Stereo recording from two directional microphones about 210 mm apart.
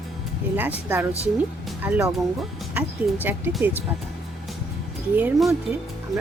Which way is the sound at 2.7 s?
10° right (ahead or behind).